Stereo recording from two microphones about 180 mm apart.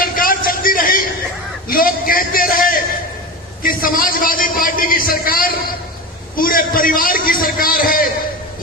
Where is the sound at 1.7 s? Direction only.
50° left (ahead or behind).